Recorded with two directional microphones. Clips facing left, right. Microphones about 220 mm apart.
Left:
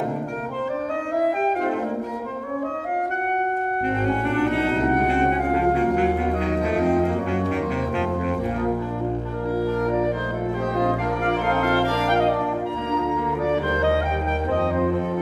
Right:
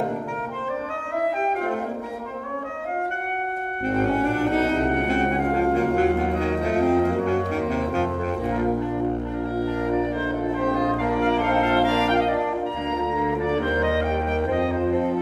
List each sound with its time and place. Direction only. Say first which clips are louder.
4.2 s music: even; 45° right (ahead or behind)